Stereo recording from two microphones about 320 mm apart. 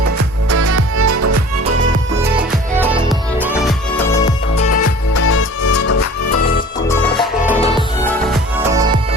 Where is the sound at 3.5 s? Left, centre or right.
Centre.